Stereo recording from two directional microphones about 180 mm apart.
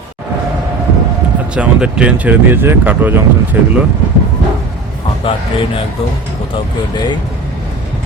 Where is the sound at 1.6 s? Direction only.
5° right (ahead or behind).